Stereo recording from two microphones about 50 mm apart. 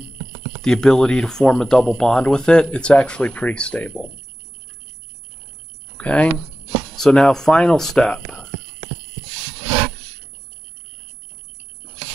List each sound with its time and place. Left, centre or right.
0.6 s speech: centre
5.9 s speech: left
7.0 s speech: centre